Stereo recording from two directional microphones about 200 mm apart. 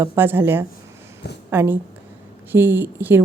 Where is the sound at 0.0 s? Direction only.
10° right (ahead or behind).